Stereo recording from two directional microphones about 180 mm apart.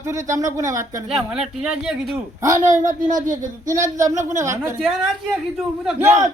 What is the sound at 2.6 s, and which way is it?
Speech, 45° right (ahead or behind).